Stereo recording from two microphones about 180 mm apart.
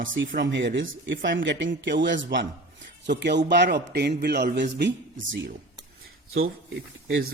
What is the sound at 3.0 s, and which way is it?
A man's voice, 70° right (ahead or behind).